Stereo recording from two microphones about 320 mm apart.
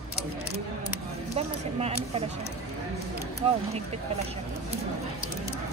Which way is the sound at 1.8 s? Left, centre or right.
Centre.